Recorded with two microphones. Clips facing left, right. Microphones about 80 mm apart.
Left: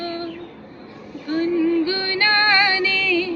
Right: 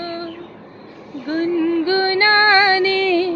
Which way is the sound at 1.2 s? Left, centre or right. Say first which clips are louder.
Right 1 dB; right.